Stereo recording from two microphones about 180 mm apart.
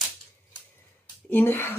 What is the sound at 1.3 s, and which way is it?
Speech, 10° left (ahead or behind).